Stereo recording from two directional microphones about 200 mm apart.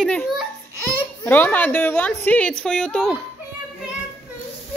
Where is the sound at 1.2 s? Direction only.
10° left (ahead or behind).